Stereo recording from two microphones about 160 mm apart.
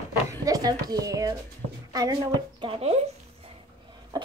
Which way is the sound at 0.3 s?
25° right (ahead or behind).